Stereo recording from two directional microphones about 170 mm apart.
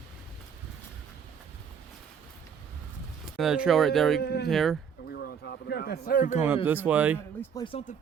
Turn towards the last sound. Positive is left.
turn(degrees=30)  # may be behind; listen again after turning